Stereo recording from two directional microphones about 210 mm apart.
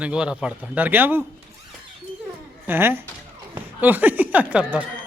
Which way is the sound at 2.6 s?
10° right (ahead or behind).